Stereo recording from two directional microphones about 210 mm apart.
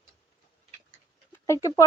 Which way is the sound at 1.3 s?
15° left (ahead or behind).